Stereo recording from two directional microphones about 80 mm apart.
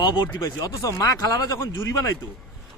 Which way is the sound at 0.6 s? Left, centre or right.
Left.